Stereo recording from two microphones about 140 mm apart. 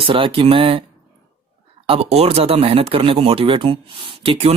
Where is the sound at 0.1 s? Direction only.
40° right (ahead or behind).